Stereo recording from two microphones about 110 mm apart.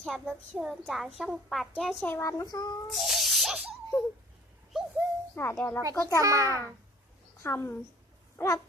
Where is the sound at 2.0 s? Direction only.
20° left (ahead or behind); by 2.7 s 40° left (ahead or behind).